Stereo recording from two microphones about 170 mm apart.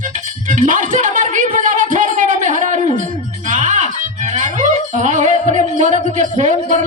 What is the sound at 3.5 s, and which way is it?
Music, 45° right (ahead or behind).